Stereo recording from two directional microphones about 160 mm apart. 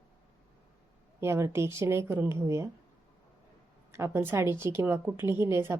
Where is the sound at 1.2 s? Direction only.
15° right (ahead or behind).